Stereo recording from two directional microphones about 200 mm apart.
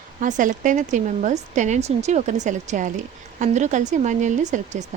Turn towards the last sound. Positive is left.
turn(degrees=-35)  # may be behind; listen again after turning